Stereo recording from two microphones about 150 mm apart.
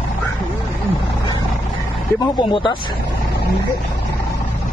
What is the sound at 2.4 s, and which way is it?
Speech, 35° left (ahead or behind).